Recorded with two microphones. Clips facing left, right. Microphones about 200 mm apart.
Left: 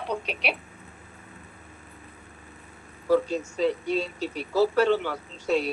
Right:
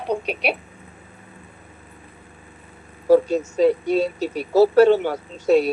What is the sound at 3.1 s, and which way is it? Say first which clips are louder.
Speech: right 7 dB; 40° right (ahead or behind).